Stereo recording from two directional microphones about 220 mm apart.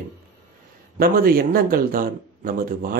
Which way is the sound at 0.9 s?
45° right (ahead or behind).